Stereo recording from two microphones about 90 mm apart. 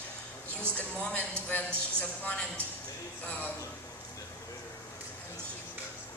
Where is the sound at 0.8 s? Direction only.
15° left (ahead or behind).